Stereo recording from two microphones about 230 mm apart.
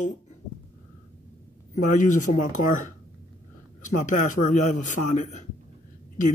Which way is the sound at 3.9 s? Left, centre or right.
Left.